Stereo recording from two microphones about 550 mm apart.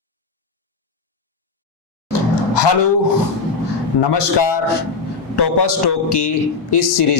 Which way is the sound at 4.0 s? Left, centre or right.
Left.